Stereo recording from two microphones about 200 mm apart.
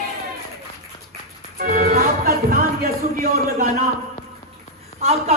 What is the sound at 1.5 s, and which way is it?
Music, 45° right (ahead or behind).